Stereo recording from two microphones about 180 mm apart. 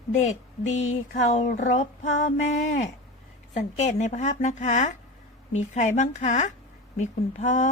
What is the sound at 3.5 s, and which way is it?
A woman's voice, 40° left (ahead or behind).